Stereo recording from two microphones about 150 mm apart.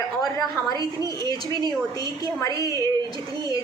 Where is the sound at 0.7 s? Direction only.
30° right (ahead or behind).